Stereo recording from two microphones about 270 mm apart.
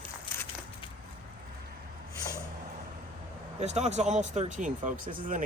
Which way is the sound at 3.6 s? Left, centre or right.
Right.